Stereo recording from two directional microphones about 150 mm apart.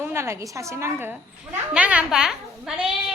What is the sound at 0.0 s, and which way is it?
A woman's voice, 15° right (ahead or behind).